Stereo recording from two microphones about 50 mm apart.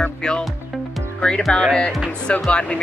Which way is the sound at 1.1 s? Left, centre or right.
Centre.